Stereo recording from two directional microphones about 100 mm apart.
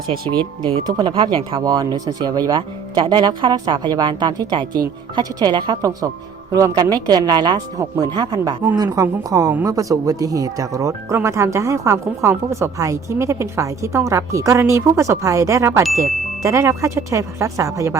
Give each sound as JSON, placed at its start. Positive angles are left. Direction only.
{"t": 0.1, "sound": "speech", "side_deg": -50}
{"t": 1.6, "sound": "speech", "side_deg": -45}